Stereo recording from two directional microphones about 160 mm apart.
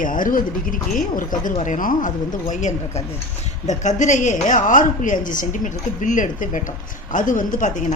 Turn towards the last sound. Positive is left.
turn(degrees=50)  # may be behind; listen again after turning